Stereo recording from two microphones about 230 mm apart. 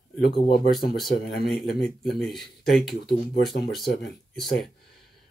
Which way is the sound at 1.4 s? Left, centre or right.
Centre.